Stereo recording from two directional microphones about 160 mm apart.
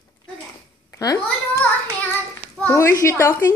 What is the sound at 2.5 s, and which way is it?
Speech, 15° left (ahead or behind).